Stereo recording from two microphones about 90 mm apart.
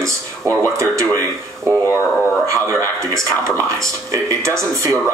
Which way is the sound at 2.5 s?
35° right (ahead or behind).